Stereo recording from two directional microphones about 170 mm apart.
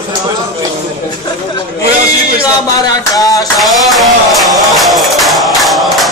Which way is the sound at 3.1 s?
20° left (ahead or behind).